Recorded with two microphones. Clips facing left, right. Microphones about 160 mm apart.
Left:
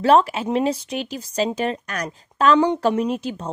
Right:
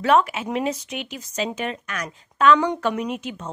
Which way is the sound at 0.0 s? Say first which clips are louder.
Left 3 dB; 30° left (ahead or behind).